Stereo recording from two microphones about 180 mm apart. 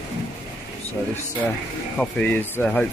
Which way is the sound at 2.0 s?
10° left (ahead or behind).